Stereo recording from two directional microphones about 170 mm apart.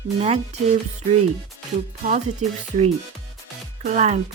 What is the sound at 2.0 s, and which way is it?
Speech, 45° right (ahead or behind).